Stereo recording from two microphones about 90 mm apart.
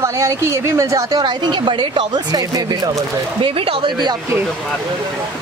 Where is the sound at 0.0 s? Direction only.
35° right (ahead or behind).